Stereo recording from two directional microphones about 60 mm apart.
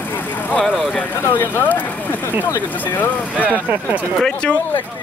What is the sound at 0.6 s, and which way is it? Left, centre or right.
Speech, centre.